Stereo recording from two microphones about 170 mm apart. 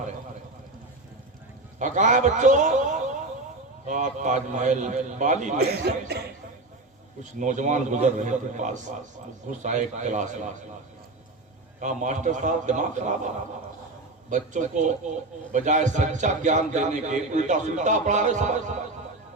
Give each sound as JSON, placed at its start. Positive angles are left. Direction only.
{"t": 1.8, "sound": "a man's voice", "side_deg": -45}
{"t": 5.8, "sound": "speech", "side_deg": -70}
{"t": 7.2, "sound": "a man's voice", "side_deg": -45}
{"t": 11.8, "sound": "a man's voice", "side_deg": -45}
{"t": 14.3, "sound": "a man's voice", "side_deg": -45}